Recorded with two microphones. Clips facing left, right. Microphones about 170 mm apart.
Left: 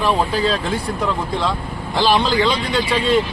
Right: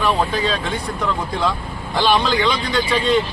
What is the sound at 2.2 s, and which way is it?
Speech, 30° left (ahead or behind).